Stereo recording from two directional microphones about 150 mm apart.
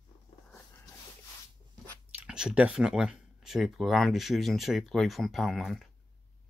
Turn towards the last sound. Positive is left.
turn(degrees=0)  # may be behind; listen again after turning